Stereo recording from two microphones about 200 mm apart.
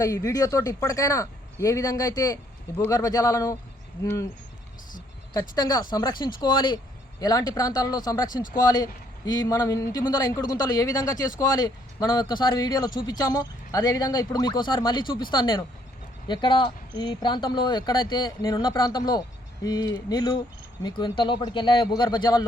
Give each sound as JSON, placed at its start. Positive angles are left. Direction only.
{"t": 0.0, "sound": "speech", "side_deg": 15}
{"t": 5.3, "sound": "a man's voice", "side_deg": 20}